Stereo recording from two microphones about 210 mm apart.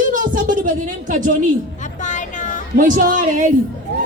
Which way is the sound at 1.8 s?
35° left (ahead or behind).